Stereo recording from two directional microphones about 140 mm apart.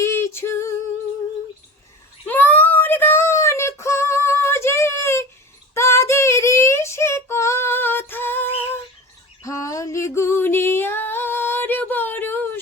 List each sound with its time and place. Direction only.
0.0 s female singing: 20° left (ahead or behind)
2.2 s child singing: 15° left (ahead or behind)
5.7 s female singing: 20° left (ahead or behind)
9.4 s music: 25° left (ahead or behind)